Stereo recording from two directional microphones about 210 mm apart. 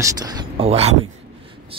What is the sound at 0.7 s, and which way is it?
Speech, 30° right (ahead or behind).